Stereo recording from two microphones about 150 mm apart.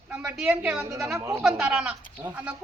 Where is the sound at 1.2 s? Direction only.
20° right (ahead or behind).